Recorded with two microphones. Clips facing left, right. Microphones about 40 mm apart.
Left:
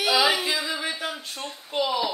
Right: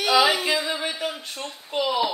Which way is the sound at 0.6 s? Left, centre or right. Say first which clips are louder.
Right 2 dB; centre.